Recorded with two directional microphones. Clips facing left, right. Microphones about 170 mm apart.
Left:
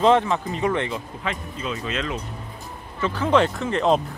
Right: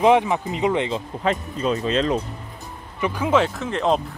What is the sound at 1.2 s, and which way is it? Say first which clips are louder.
Speech: right 10 dB; 40° right (ahead or behind).